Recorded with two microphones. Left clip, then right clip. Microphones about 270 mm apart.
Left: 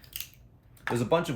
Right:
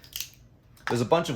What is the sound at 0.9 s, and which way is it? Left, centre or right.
Speech, right.